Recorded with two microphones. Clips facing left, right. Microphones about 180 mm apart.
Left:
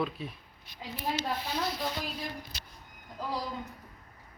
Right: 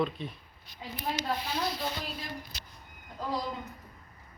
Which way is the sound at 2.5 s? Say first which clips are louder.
Left 1 dB; 35° left (ahead or behind).